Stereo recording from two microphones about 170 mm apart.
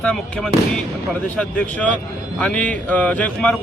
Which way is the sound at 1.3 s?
5° left (ahead or behind).